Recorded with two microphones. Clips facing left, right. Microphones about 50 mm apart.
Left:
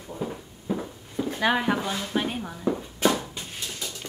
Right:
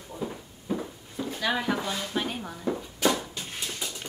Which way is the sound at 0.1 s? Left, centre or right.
Centre.